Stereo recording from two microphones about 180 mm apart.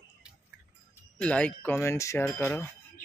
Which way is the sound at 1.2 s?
5° left (ahead or behind).